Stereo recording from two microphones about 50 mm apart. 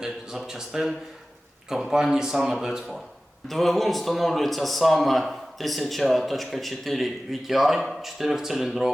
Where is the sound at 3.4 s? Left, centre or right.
Centre.